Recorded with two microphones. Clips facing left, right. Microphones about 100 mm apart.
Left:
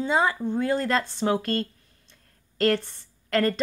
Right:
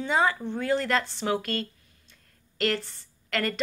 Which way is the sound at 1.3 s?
35° left (ahead or behind).